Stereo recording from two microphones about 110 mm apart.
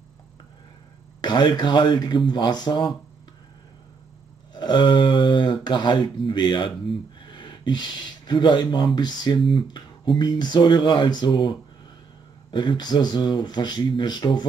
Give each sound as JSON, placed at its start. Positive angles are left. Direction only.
{"t": 1.2, "sound": "speech", "side_deg": 45}
{"t": 4.6, "sound": "speech", "side_deg": 45}